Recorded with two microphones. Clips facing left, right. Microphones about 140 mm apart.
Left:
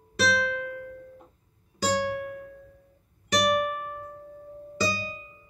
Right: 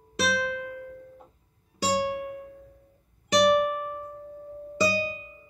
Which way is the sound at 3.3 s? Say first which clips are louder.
Right 4 dB; 25° right (ahead or behind).